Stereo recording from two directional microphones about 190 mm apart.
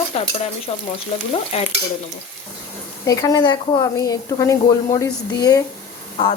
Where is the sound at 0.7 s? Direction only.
30° left (ahead or behind).